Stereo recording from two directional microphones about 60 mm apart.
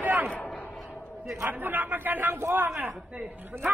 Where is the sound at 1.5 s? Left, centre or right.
Right.